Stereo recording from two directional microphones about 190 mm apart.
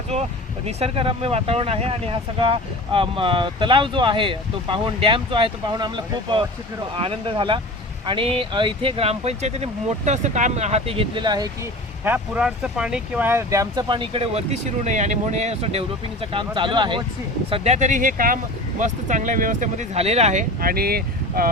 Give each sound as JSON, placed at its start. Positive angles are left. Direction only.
{"t": 0.8, "sound": "speech", "side_deg": -30}
{"t": 12.0, "sound": "speech", "side_deg": -10}